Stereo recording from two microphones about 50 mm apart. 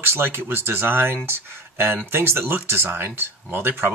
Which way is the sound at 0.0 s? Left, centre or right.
Right.